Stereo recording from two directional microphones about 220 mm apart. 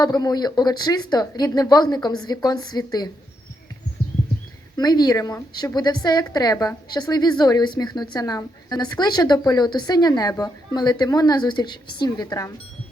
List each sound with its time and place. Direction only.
0.0 s speech: 20° left (ahead or behind)
4.8 s a woman's voice: 20° left (ahead or behind)